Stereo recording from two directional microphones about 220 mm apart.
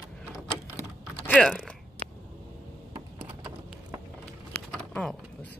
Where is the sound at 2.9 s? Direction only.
20° right (ahead or behind).